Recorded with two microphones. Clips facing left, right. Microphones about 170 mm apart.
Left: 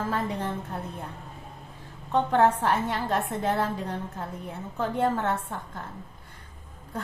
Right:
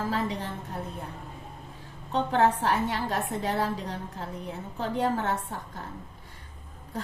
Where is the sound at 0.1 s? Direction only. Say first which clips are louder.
Left 1 dB; 50° left (ahead or behind).